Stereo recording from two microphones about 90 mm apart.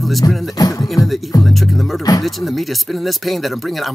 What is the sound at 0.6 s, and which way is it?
Music, 45° left (ahead or behind).